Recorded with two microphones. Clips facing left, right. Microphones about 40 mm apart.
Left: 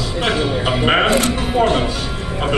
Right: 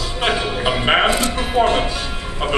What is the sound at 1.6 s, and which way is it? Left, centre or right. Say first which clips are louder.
Speech: even; centre.